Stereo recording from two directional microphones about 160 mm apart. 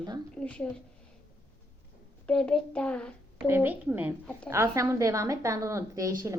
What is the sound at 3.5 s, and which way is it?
A woman's voice, 10° right (ahead or behind).